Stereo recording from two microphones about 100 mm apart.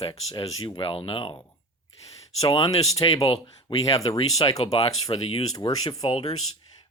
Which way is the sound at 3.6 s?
35° left (ahead or behind).